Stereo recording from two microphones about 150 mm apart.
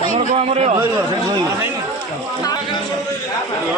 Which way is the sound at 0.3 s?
45° right (ahead or behind).